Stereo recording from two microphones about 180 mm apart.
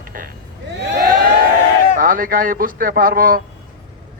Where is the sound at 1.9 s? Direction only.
50° right (ahead or behind).